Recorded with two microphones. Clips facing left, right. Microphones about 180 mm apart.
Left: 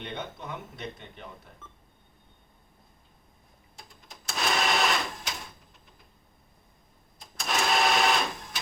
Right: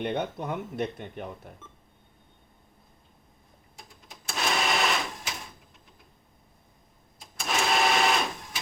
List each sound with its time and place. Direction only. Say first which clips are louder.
0.0 s speech: right 8 dB; 55° right (ahead or behind)
1.6 s telephone dialing: right 1 dB; 5° right (ahead or behind)
4.1 s printer: even; centre (ahead or behind)
7.2 s sewing machine: even; 5° right (ahead or behind)